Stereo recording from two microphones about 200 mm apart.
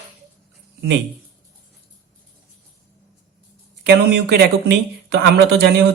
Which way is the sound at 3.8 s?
60° right (ahead or behind).